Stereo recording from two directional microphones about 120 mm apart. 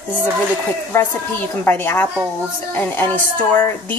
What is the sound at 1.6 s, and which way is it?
A woman's voice, 15° left (ahead or behind).